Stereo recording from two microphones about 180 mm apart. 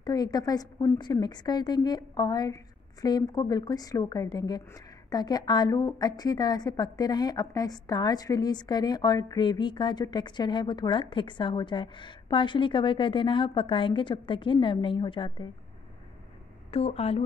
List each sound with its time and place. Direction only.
0.0 s a woman's voice: 20° left (ahead or behind)
16.7 s speech: 35° left (ahead or behind)